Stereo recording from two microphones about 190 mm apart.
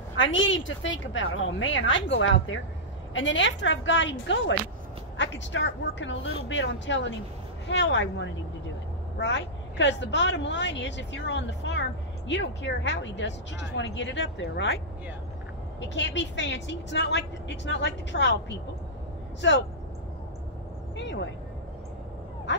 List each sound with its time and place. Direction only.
0.2 s a woman's voice: 85° left; by 14.8 s 65° left (ahead or behind)
15.8 s a woman's voice: 70° left (ahead or behind)
20.9 s vehicle: 70° left (ahead or behind)